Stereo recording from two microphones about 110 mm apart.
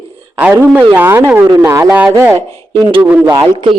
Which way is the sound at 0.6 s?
15° right (ahead or behind).